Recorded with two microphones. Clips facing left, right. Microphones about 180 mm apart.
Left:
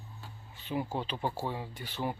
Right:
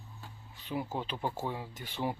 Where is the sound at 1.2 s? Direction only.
10° left (ahead or behind).